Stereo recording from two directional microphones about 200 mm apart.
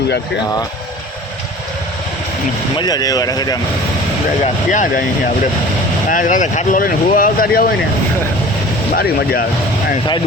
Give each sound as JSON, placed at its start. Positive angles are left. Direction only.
{"t": 2.7, "sound": "speech", "side_deg": 20}
{"t": 4.7, "sound": "speech", "side_deg": 40}
{"t": 6.1, "sound": "speech", "side_deg": 40}